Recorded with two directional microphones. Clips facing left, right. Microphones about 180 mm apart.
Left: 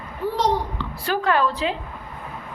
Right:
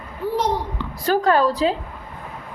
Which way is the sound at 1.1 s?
40° right (ahead or behind).